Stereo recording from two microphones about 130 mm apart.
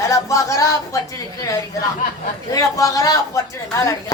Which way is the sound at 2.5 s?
25° left (ahead or behind).